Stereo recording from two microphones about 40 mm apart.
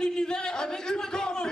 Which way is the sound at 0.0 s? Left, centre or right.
Centre.